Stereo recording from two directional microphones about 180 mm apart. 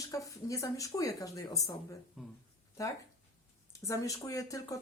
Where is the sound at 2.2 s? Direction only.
5° right (ahead or behind).